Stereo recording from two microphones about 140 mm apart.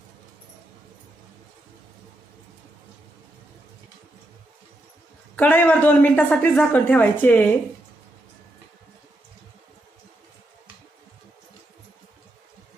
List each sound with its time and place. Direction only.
5.4 s a woman's voice: 15° left (ahead or behind)